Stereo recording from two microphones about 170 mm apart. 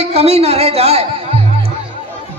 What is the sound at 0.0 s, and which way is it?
A man's voice, 35° right (ahead or behind).